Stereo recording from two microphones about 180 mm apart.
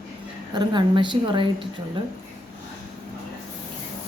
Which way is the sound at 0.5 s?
25° right (ahead or behind).